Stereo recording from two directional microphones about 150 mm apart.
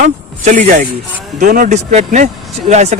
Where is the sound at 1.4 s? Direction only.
60° right (ahead or behind).